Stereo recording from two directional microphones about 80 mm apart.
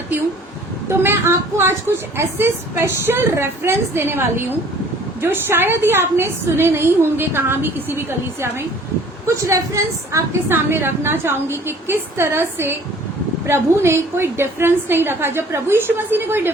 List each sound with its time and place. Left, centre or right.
0.9 s a woman's voice: right
10.5 s a woman's voice: right